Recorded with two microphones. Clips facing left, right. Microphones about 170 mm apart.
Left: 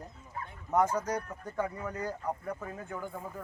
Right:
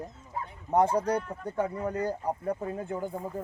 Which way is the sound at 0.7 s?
30° right (ahead or behind).